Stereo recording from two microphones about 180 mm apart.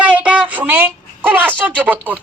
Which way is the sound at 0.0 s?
10° right (ahead or behind).